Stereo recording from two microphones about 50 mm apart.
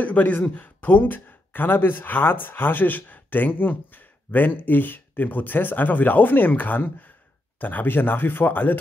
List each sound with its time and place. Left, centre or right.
0.0 s speech: left